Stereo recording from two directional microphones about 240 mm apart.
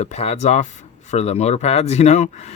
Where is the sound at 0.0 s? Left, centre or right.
Left.